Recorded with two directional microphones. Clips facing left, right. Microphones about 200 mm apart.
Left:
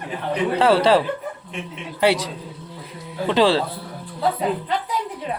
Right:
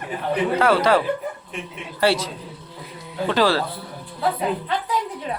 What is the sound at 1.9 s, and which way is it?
A woman's voice, 15° left (ahead or behind).